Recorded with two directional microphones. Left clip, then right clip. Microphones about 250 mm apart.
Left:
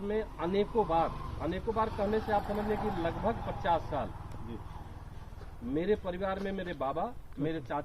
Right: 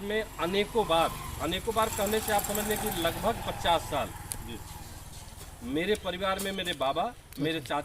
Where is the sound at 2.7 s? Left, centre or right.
Right.